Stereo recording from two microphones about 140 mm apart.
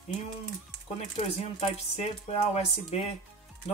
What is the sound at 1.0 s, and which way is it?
Speech, 50° left (ahead or behind).